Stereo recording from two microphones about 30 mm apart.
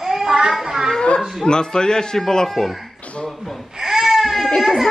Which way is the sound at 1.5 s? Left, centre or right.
Left.